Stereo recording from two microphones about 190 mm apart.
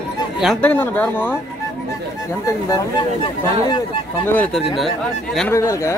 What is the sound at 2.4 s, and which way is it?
Speech, 20° left (ahead or behind).